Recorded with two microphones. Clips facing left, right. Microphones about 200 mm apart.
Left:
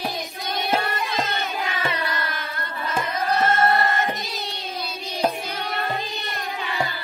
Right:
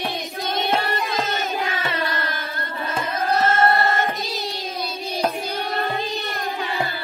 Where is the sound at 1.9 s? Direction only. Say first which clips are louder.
Right 2 dB; 30° right (ahead or behind).